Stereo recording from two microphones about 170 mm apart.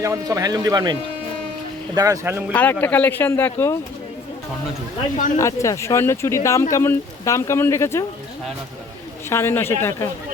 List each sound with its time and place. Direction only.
0.0 s speech: 20° right (ahead or behind)
2.0 s speech: 15° right (ahead or behind)
2.5 s speech: 10° left (ahead or behind)
5.4 s speech: 20° left (ahead or behind)
9.3 s speech: 15° left (ahead or behind)